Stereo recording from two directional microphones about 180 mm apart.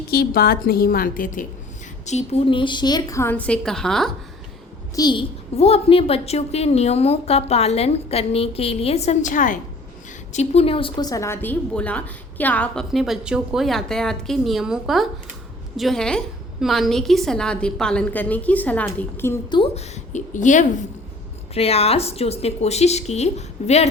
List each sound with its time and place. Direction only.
0.1 s a woman's voice: 60° left (ahead or behind)
2.0 s a woman's voice: 35° left (ahead or behind); by 4.1 s centre (ahead or behind)
4.9 s a child's voice: 25° left (ahead or behind); by 9.6 s 45° left (ahead or behind)
10.3 s a woman's voice: 35° left (ahead or behind); by 19.4 s 15° left (ahead or behind)
19.5 s a woman's voice: 30° left (ahead or behind)